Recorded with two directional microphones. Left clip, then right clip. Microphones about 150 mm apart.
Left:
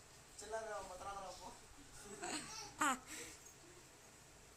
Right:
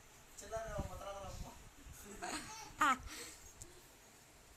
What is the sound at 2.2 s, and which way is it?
Laughter, centre (ahead or behind).